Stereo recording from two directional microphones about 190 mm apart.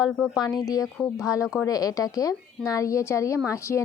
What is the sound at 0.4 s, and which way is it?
Speech, 20° left (ahead or behind).